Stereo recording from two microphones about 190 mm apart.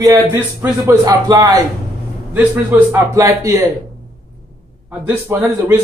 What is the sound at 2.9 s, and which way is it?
Speech, 15° right (ahead or behind).